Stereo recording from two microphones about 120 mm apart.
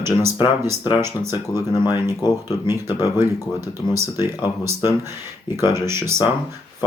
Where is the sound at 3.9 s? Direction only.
20° right (ahead or behind).